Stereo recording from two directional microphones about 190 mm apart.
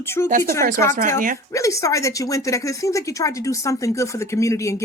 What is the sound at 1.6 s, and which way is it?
Speech, 15° left (ahead or behind).